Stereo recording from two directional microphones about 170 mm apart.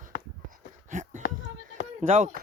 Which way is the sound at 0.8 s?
45° right (ahead or behind).